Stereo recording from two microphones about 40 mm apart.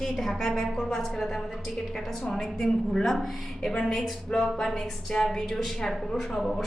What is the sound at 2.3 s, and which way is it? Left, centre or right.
A woman's voice, centre.